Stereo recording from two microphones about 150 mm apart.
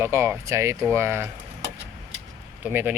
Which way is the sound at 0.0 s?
15° right (ahead or behind).